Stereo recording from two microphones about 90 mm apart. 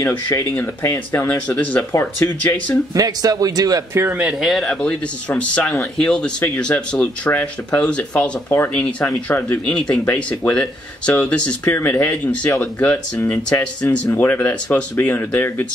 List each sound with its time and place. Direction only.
0.0 s speech: 40° left (ahead or behind)
0.6 s speech: 25° left (ahead or behind)
1.9 s speech: 30° left (ahead or behind)
2.9 s a man's voice: 40° right (ahead or behind)
3.9 s speech: 25° right (ahead or behind)
4.2 s speech: 5° right (ahead or behind)
5.3 s speech: 15° left (ahead or behind)